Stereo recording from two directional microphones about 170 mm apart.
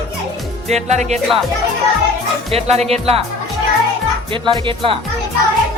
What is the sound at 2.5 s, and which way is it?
Speech, 35° right (ahead or behind).